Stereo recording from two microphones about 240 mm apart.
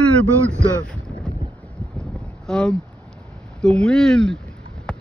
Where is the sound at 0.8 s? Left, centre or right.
Centre.